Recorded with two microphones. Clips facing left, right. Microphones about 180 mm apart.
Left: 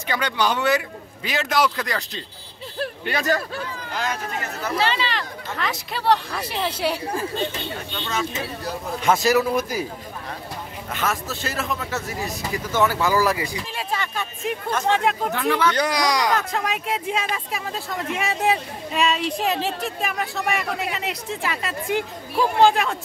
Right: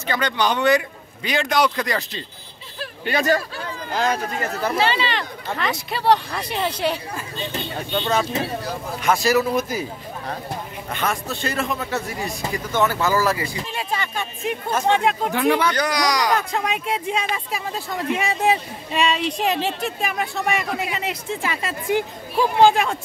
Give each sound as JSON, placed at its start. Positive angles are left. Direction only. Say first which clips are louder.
{"t": 0.0, "sound": "speech", "louder": "right 1 dB", "side_deg": 10}
{"t": 3.9, "sound": "speech", "louder": "right 6 dB", "side_deg": -35}
{"t": 4.7, "sound": "speech", "louder": "even", "side_deg": 0}
{"t": 7.9, "sound": "speech", "louder": "right 7 dB", "side_deg": -35}
{"t": 9.0, "sound": "speech", "louder": "even", "side_deg": 20}
{"t": 10.9, "sound": "speech", "louder": "right 1 dB", "side_deg": 5}
{"t": 13.7, "sound": "speech", "louder": "right 1 dB", "side_deg": 0}
{"t": 15.3, "sound": "speech", "louder": "right 4 dB", "side_deg": -15}
{"t": 15.7, "sound": "speech", "louder": "even", "side_deg": 25}
{"t": 16.3, "sound": "speech", "louder": "right 1 dB", "side_deg": 0}